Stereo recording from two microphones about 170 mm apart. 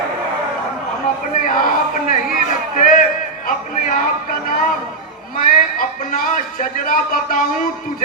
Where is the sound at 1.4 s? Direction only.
55° left (ahead or behind).